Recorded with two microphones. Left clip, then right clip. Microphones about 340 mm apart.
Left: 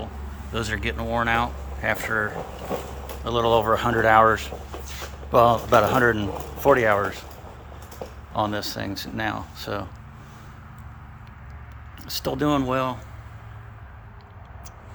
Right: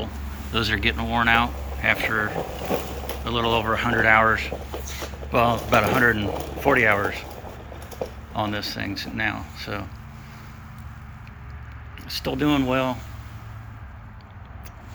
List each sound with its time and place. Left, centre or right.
0.5 s speech: centre
8.3 s speech: centre
12.0 s speech: centre